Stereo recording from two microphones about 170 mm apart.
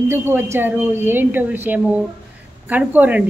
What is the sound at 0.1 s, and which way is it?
Speech, 15° right (ahead or behind).